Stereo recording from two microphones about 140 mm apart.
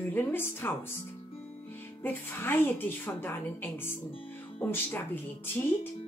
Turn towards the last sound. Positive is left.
turn(degrees=15)  # may be behind; listen again after turning